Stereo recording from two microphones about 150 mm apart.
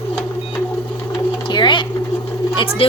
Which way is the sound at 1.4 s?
30° left (ahead or behind).